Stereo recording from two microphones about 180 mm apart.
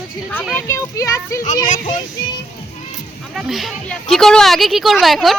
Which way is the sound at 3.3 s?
Centre (ahead or behind).